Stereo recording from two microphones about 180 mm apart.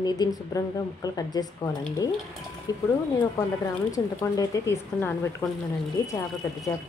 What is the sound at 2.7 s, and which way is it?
Speech, 20° left (ahead or behind).